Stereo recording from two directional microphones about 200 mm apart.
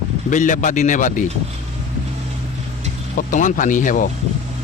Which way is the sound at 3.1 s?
45° left (ahead or behind).